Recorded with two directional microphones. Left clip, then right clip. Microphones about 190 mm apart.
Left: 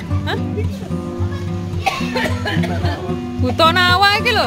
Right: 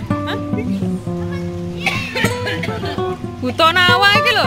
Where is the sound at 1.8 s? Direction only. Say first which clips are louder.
Even; 35° left (ahead or behind).